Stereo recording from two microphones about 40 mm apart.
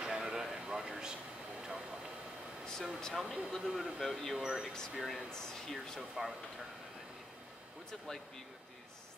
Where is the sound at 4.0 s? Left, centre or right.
Centre.